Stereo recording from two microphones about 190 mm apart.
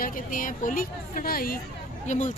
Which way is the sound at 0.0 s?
45° left (ahead or behind).